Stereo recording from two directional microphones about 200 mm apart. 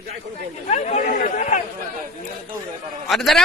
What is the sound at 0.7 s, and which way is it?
Speech, 35° left (ahead or behind).